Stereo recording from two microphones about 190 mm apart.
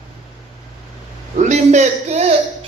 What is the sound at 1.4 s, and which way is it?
Speech, 40° right (ahead or behind).